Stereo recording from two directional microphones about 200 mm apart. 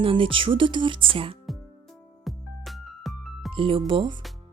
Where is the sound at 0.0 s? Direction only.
25° right (ahead or behind).